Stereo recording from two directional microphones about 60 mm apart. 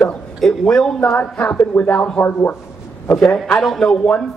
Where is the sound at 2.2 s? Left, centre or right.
Left.